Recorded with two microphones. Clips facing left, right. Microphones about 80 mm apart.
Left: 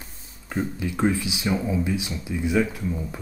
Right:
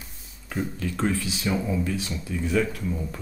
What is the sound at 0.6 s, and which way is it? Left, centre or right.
Speech, centre.